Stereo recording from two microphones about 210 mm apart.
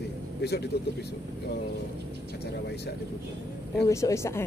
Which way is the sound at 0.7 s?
50° left (ahead or behind).